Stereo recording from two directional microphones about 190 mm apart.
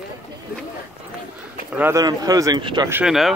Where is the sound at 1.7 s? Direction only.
10° right (ahead or behind).